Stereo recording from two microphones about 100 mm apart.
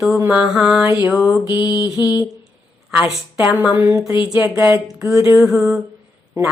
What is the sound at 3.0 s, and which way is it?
Mantra, 5° right (ahead or behind).